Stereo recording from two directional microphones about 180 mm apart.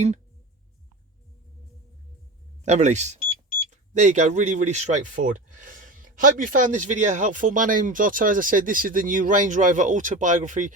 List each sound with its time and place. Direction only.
2.6 s speech: 40° right (ahead or behind)